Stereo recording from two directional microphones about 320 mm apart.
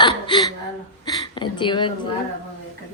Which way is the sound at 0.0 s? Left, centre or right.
Centre.